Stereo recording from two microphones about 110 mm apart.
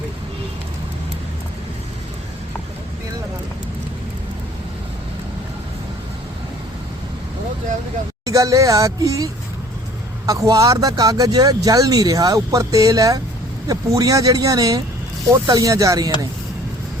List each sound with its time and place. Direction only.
8.2 s speech: 30° right (ahead or behind)